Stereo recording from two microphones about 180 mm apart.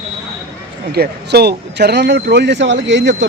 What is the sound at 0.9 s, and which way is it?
Speech, 65° right (ahead or behind).